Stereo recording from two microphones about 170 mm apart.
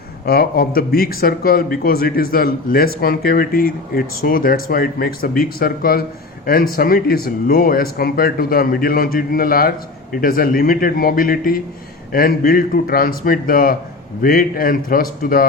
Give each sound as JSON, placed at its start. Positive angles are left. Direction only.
{"t": 0.3, "sound": "speech", "side_deg": 65}